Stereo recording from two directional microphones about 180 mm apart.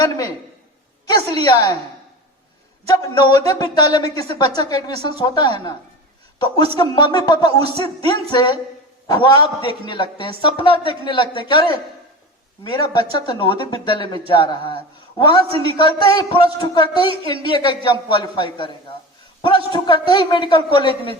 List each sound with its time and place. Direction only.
0.0 s speech: 20° left (ahead or behind)
3.0 s speech: 20° left (ahead or behind)
12.7 s speech: 25° left (ahead or behind)